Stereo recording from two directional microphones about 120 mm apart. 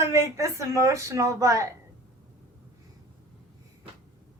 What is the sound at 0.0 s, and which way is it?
A woman's voice, 25° right (ahead or behind).